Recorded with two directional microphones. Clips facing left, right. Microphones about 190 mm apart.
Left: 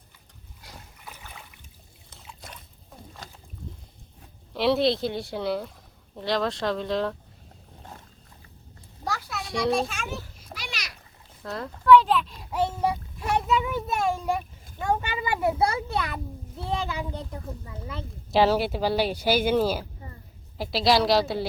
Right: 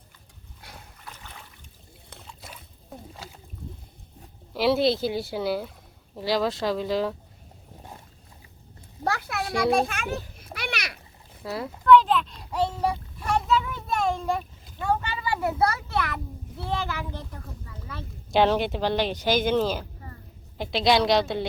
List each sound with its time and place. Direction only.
1.0 s trickle: 10° left (ahead or behind)
2.2 s a sound: centre (ahead or behind)
4.5 s speech: centre (ahead or behind)
9.0 s children playing: 60° right (ahead or behind)
11.4 s a child's voice: 5° right (ahead or behind)
13.2 s a sound: 10° left (ahead or behind)
16.8 s speech: 20° left (ahead or behind)
18.3 s speech: 5° left (ahead or behind)